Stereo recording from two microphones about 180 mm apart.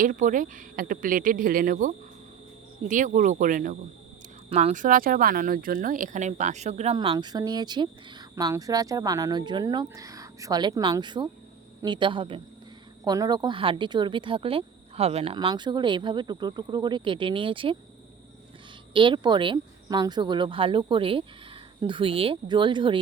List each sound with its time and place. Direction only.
0.0 s speech: 45° right (ahead or behind)
2.9 s speech: 45° right (ahead or behind)
4.4 s speech: 35° right (ahead or behind)
18.9 s speech: 25° right (ahead or behind)